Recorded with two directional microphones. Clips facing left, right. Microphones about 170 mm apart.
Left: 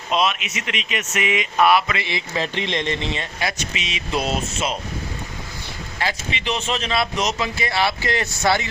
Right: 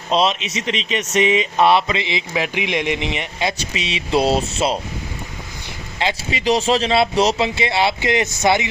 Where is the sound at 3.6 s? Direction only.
30° right (ahead or behind).